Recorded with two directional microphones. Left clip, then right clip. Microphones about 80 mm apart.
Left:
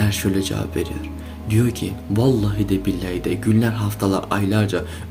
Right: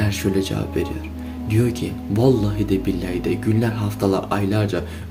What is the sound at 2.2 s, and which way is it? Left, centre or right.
Speech, centre.